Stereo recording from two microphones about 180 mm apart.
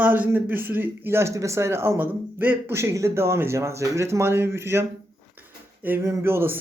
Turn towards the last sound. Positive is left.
turn(degrees=-10)  # may be behind; listen again after turning